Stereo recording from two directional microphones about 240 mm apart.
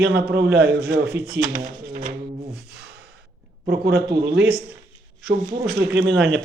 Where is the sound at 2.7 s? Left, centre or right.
Right.